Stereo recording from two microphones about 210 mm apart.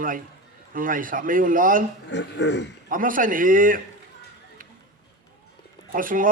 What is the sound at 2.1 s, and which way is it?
Speech, 55° left (ahead or behind).